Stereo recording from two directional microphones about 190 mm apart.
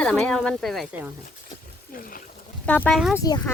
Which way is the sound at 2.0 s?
50° left (ahead or behind).